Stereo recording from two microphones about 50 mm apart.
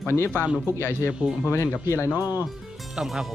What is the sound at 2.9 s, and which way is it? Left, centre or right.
Speech, centre.